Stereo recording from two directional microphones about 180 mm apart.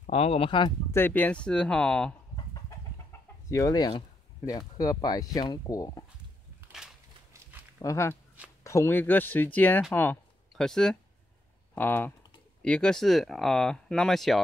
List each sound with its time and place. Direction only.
0.0 s speech: 35° left (ahead or behind)
0.9 s speech: 10° left (ahead or behind)
3.1 s chicken: 15° left (ahead or behind)
4.5 s speech: 20° left (ahead or behind)
7.8 s speech: 15° left (ahead or behind)